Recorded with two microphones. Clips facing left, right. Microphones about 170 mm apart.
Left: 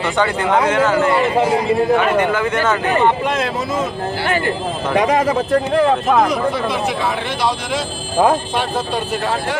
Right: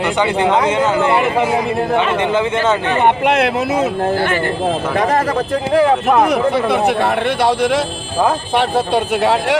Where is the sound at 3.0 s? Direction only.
65° right (ahead or behind).